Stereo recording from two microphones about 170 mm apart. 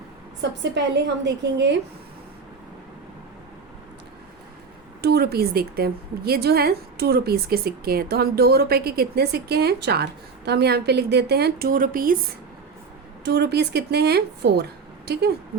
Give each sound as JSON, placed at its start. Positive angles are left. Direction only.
{"t": 0.4, "sound": "a woman's voice", "side_deg": -90}
{"t": 5.0, "sound": "a woman's voice", "side_deg": -70}
{"t": 13.2, "sound": "a woman's voice", "side_deg": -80}